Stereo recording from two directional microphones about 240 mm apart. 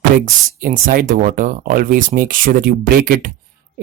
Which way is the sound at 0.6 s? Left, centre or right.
Right.